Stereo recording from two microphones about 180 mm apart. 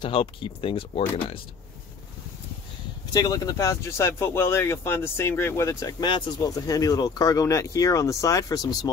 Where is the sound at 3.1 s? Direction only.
20° left (ahead or behind).